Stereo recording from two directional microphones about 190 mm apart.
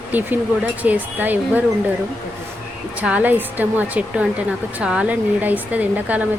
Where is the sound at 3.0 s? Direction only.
5° right (ahead or behind).